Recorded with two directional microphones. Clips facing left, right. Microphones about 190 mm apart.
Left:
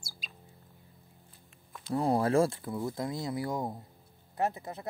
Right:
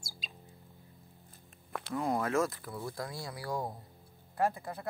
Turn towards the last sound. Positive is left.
turn(degrees=20)  # may be behind; listen again after turning